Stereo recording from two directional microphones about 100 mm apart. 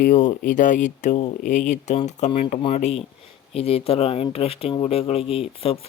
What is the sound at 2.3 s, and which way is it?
Speech, 75° left (ahead or behind).